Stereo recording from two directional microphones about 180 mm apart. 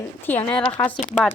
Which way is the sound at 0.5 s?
25° left (ahead or behind).